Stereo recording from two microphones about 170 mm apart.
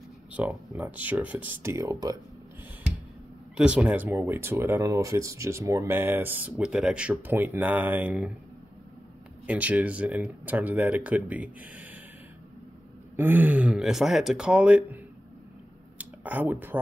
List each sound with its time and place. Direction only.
0.3 s speech: 10° right (ahead or behind)
3.5 s speech: 5° right (ahead or behind)
9.5 s speech: 10° right (ahead or behind)
13.1 s speech: 10° right (ahead or behind)
16.0 s speech: 10° right (ahead or behind)